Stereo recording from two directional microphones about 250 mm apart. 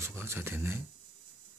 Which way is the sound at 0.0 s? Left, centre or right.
Centre.